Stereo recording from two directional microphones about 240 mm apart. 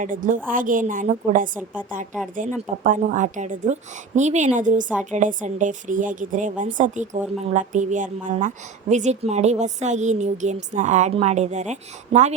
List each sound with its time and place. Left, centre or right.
0.0 s a woman's voice: right